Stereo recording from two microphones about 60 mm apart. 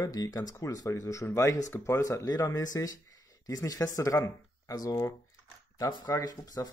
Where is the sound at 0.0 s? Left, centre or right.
Left.